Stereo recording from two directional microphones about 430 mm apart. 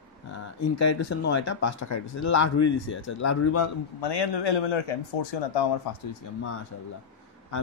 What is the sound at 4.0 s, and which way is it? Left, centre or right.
Speech, left.